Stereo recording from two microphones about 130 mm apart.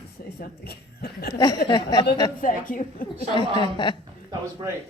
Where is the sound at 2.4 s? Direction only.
90° left.